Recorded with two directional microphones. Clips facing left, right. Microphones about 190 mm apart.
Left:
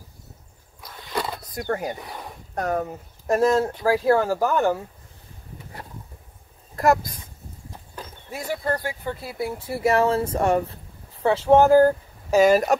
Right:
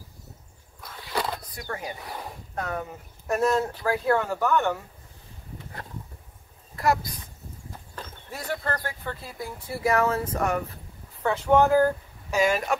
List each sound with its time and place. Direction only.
0.7 s a sound: centre (ahead or behind)
1.6 s speech: 60° left (ahead or behind)
2.5 s speech: 40° left (ahead or behind)
6.8 s speech: 45° left (ahead or behind)
7.9 s a sound: 10° left (ahead or behind)
8.8 s speech: 10° left (ahead or behind)
9.7 s speech: 25° left (ahead or behind)